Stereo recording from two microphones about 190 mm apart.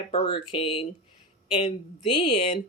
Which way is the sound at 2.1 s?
25° left (ahead or behind).